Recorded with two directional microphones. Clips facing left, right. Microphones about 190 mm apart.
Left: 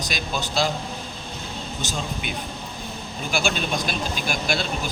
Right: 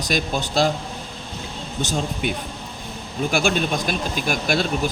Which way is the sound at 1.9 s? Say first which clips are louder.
Right 7 dB; 50° right (ahead or behind).